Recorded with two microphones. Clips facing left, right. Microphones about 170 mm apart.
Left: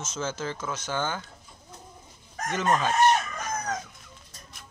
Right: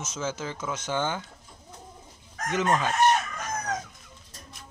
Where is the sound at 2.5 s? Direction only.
15° right (ahead or behind).